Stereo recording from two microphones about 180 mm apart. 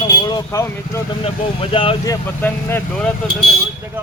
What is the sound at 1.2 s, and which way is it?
Speech, 30° left (ahead or behind).